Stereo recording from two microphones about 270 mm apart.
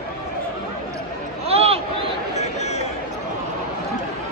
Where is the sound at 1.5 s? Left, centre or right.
Right.